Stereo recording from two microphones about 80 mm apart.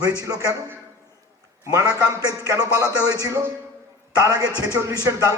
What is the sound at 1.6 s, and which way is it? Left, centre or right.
Speech, right.